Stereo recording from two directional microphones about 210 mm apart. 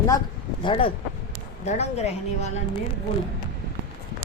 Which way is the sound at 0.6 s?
25° left (ahead or behind).